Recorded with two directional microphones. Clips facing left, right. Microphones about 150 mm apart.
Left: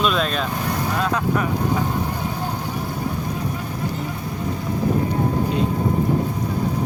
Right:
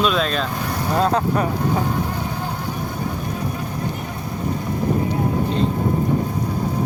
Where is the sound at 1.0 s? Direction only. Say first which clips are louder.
Right 5 dB; 30° right (ahead or behind).